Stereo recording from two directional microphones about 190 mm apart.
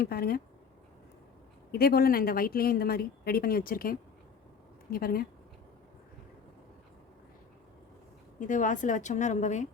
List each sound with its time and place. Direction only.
0.0 s a woman's voice: 55° left (ahead or behind)
1.7 s a woman's voice: 55° left (ahead or behind)
8.4 s a woman's voice: 40° left (ahead or behind)